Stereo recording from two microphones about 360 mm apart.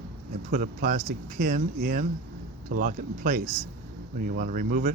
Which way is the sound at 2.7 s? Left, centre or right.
Right.